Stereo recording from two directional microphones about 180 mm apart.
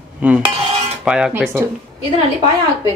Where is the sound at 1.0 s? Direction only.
5° right (ahead or behind).